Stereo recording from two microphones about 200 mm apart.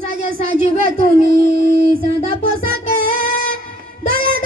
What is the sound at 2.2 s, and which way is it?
Music, 45° right (ahead or behind).